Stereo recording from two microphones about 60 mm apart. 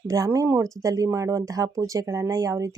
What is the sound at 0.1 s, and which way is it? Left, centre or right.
Speech, right.